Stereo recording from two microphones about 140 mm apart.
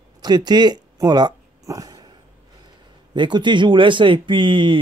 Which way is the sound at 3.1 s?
35° right (ahead or behind).